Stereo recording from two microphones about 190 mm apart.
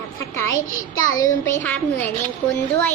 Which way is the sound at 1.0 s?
45° left (ahead or behind).